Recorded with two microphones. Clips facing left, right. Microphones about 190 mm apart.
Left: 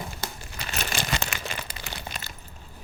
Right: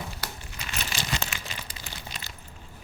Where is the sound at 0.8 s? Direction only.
60° left (ahead or behind).